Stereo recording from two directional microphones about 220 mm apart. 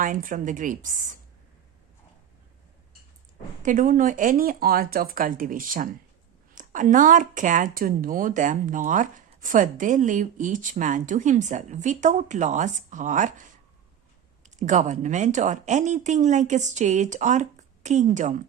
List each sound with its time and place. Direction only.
0.0 s speech: 40° right (ahead or behind)
3.6 s speech: 35° right (ahead or behind)
14.5 s speech: 35° right (ahead or behind)